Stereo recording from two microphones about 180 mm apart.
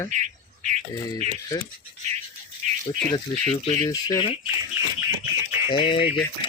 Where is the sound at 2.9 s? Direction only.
30° left (ahead or behind).